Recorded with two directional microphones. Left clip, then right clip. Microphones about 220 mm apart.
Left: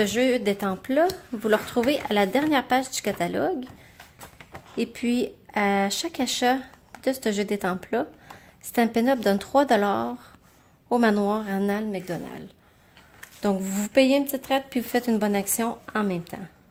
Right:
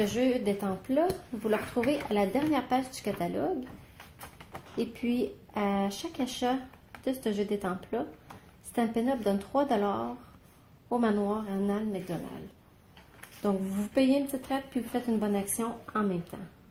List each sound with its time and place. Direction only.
0.0 s speech: 40° left (ahead or behind)
4.8 s speech: 40° left (ahead or behind)
13.4 s speech: 45° left (ahead or behind)